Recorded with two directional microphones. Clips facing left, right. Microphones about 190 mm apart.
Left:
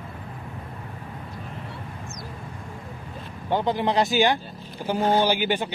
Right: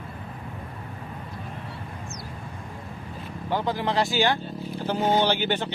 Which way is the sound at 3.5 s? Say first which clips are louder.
Left 3 dB; 20° left (ahead or behind).